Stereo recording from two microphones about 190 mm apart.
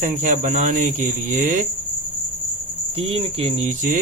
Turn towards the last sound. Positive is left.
turn(degrees=-40)  # may be behind; listen again after turning